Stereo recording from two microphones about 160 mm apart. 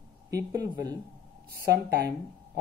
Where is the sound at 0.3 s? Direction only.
20° right (ahead or behind).